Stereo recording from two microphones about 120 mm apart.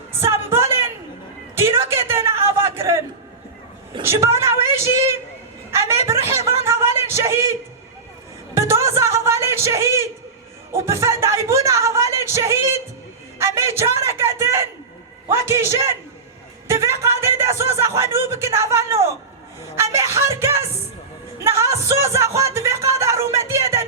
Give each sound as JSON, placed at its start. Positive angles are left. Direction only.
{"t": 0.5, "sound": "a sound", "side_deg": -20}
{"t": 4.0, "sound": "a woman's voice", "side_deg": -20}
{"t": 6.3, "sound": "a sound", "side_deg": -25}
{"t": 8.5, "sound": "music", "side_deg": -25}
{"t": 13.4, "sound": "a sound", "side_deg": -25}
{"t": 15.3, "sound": "speech", "side_deg": -20}
{"t": 16.6, "sound": "music", "side_deg": -25}
{"t": 17.7, "sound": "speech", "side_deg": -25}
{"t": 23.5, "sound": "music", "side_deg": -25}